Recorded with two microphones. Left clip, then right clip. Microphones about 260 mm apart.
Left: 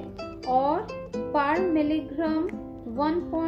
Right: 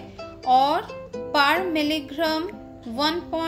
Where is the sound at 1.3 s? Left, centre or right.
Right.